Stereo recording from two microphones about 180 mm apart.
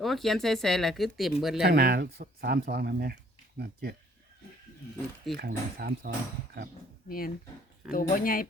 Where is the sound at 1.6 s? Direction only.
65° right (ahead or behind).